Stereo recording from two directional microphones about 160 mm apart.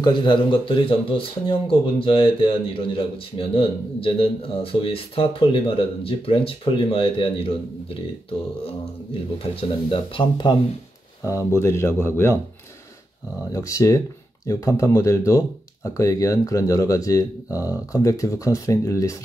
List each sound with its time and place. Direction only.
0.0 s speech: 30° left (ahead or behind)
9.4 s speech: 35° left (ahead or behind)
11.2 s speech: 20° left (ahead or behind)
13.5 s speech: 20° left (ahead or behind)